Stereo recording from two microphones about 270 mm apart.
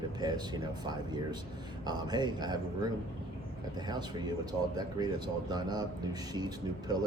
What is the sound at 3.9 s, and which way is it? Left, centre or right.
Speech, centre.